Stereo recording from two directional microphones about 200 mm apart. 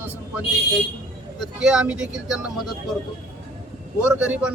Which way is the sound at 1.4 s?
5° right (ahead or behind).